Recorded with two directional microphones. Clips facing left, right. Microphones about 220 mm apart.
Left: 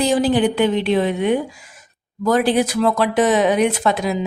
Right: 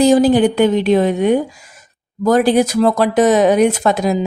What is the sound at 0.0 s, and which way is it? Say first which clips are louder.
Speech: right 6 dB; 45° right (ahead or behind).